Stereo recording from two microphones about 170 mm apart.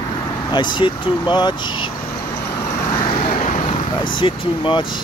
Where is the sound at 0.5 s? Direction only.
25° left (ahead or behind).